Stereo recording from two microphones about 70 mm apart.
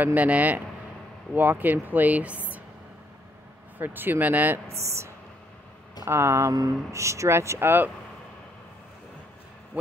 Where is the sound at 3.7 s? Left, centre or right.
Right.